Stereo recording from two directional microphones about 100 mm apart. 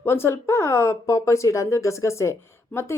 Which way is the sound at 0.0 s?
25° left (ahead or behind).